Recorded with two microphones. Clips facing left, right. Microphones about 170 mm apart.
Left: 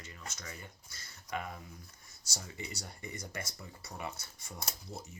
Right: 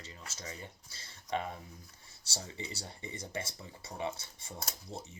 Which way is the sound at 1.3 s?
30° right (ahead or behind).